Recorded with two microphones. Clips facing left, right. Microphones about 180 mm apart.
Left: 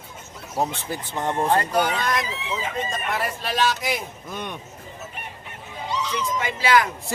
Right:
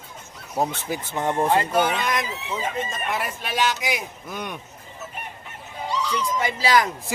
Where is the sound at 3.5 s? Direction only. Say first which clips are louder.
Even; 15° right (ahead or behind).